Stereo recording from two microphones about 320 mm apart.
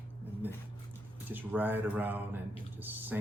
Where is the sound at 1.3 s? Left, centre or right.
Centre.